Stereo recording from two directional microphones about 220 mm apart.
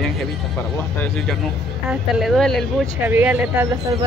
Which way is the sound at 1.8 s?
Centre (ahead or behind).